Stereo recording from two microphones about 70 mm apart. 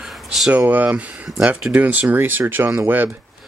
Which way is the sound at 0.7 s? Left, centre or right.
Right.